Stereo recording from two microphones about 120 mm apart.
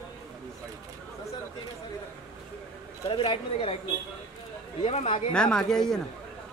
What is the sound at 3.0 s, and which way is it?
Speech, 45° left (ahead or behind).